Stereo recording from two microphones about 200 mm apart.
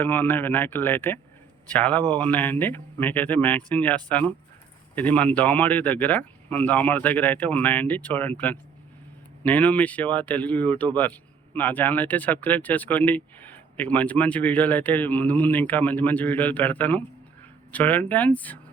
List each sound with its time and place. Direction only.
0.0 s speech: 10° left (ahead or behind)